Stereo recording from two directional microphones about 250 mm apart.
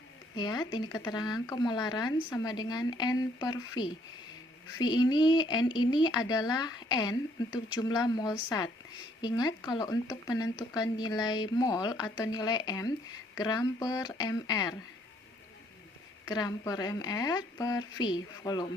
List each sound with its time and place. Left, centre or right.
0.3 s speech: centre
16.2 s speech: centre